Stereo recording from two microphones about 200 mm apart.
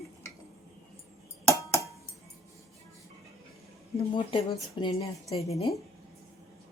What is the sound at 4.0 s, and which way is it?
Speech, 25° left (ahead or behind).